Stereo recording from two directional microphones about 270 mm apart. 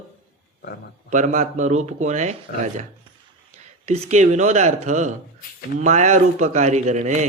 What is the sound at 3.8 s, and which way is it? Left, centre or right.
Speech, right.